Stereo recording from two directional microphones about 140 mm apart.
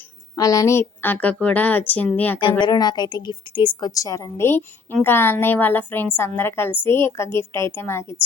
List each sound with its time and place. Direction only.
0.3 s a woman's voice: 25° left (ahead or behind)
2.4 s a woman's voice: 30° left (ahead or behind)